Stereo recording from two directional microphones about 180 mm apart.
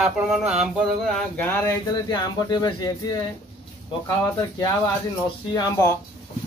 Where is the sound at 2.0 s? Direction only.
20° left (ahead or behind).